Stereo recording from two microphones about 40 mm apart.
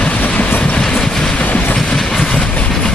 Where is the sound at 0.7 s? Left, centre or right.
Centre.